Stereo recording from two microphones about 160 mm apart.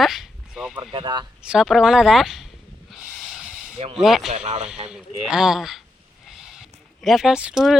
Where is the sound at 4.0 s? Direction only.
Centre (ahead or behind).